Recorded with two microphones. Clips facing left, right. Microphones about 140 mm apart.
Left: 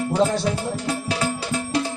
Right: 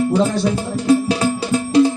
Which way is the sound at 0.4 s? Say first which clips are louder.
Right 8 dB; 25° right (ahead or behind).